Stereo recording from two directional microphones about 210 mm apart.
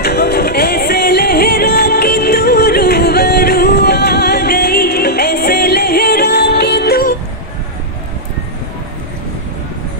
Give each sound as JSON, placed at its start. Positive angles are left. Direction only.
{"t": 0.0, "sound": "music", "side_deg": 50}